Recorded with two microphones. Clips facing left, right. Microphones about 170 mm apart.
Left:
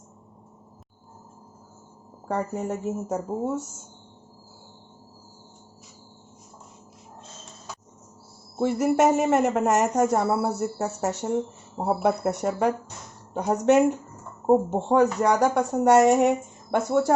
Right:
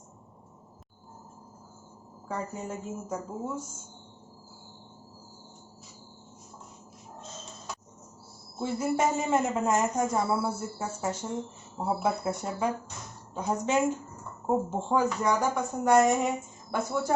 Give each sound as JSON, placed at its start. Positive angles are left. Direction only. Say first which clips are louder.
{"t": 2.2, "sound": "speech", "louder": "left 7 dB", "side_deg": 65}
{"t": 8.5, "sound": "speech", "louder": "left 7 dB", "side_deg": 70}